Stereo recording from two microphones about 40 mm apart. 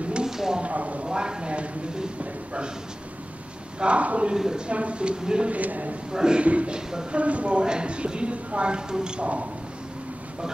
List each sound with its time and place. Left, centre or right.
0.2 s a sound: centre
0.6 s speech: right
1.0 s speech: right
3.8 s speech: right
4.4 s speech: centre
4.6 s speech: right
5.5 s speech: right
6.1 s speech: centre
6.4 s speech: right
6.9 s speech: centre
7.2 s speech: right